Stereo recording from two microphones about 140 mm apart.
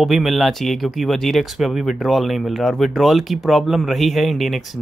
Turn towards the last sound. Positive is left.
turn(degrees=0)  # may be behind; listen again after turning